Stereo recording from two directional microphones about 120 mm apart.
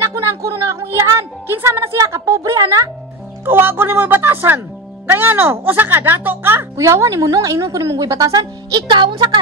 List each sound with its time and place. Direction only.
0.0 s music: 20° right (ahead or behind)
3.4 s a woman's voice: 15° right (ahead or behind); by 9.3 s 40° right (ahead or behind)